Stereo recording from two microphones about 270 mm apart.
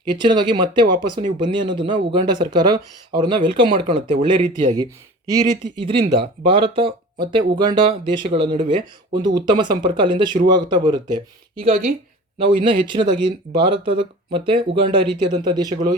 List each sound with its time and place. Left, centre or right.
0.1 s speech: centre